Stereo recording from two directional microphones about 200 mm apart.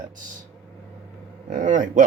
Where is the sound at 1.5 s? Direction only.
40° right (ahead or behind).